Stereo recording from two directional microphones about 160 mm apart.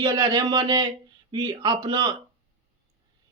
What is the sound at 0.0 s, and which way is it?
Speech, 25° right (ahead or behind).